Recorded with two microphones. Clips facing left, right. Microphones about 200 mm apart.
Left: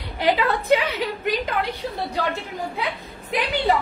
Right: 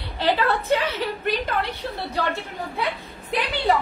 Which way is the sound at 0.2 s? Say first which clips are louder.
Left 1 dB; 15° left (ahead or behind).